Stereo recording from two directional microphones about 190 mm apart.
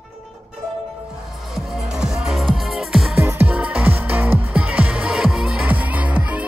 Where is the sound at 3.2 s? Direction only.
10° right (ahead or behind).